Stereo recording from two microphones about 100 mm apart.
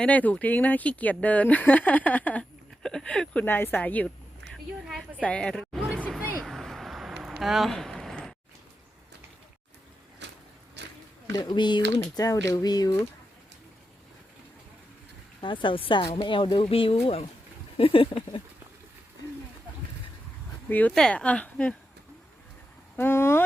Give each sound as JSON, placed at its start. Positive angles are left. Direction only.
{"t": 0.0, "sound": "speech", "side_deg": 15}
{"t": 4.4, "sound": "a sound", "side_deg": 0}
{"t": 5.2, "sound": "a woman's voice", "side_deg": 10}
{"t": 6.4, "sound": "a sound", "side_deg": 0}
{"t": 11.3, "sound": "speech", "side_deg": 45}
{"t": 12.1, "sound": "speech", "side_deg": 35}
{"t": 15.4, "sound": "speech", "side_deg": 55}
{"t": 20.7, "sound": "speech", "side_deg": 15}
{"t": 20.9, "sound": "speech", "side_deg": 5}
{"t": 23.0, "sound": "speech", "side_deg": 25}